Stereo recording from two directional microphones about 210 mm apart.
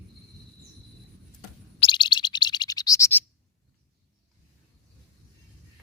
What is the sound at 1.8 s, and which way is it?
Bird, 20° left (ahead or behind).